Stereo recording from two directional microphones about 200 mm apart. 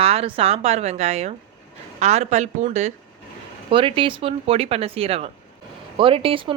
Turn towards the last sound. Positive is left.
turn(degrees=-25)  # may be behind; listen again after turning